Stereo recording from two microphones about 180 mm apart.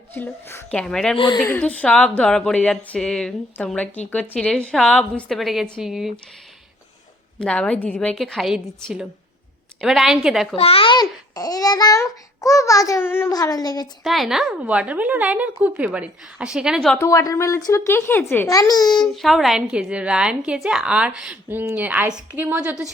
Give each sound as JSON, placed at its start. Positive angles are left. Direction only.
{"t": 0.1, "sound": "speech", "side_deg": 10}
{"t": 1.1, "sound": "a child's voice", "side_deg": 25}
{"t": 1.4, "sound": "a woman's voice", "side_deg": 10}
{"t": 7.3, "sound": "a woman's voice", "side_deg": 5}
{"t": 10.5, "sound": "a child's voice", "side_deg": 30}
{"t": 14.0, "sound": "a woman's voice", "side_deg": 0}
{"t": 16.9, "sound": "speech", "side_deg": 15}
{"t": 19.0, "sound": "a woman's voice", "side_deg": 0}